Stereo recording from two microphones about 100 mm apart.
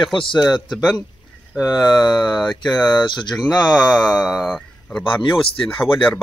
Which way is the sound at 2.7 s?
45° left (ahead or behind).